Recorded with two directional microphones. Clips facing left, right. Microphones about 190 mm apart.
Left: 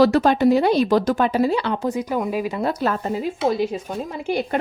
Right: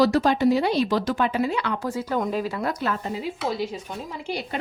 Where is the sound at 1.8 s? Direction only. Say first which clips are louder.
Left 3 dB; 15° left (ahead or behind).